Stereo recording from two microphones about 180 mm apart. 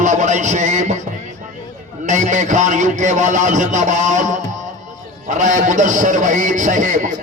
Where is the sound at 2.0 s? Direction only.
45° right (ahead or behind).